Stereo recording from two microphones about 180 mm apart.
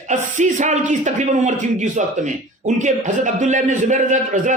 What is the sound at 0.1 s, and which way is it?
A man's voice, 40° right (ahead or behind).